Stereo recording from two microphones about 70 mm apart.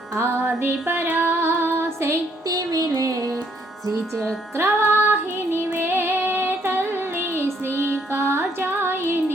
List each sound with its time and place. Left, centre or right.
0.2 s female singing: right
1.3 s music: right
2.5 s music: right
4.5 s female singing: right